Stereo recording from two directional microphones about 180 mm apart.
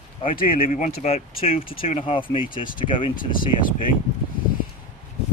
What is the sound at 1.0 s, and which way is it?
Speech, 35° left (ahead or behind).